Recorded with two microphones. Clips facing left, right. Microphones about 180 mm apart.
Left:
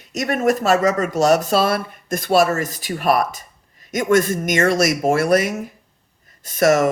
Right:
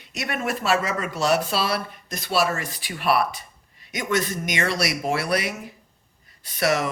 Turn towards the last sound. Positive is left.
turn(degrees=45)  # may be behind; listen again after turning